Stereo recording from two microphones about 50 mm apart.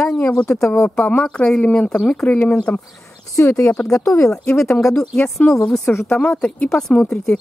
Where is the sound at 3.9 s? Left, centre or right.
Left.